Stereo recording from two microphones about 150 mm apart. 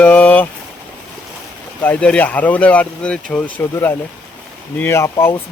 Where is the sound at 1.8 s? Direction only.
10° left (ahead or behind).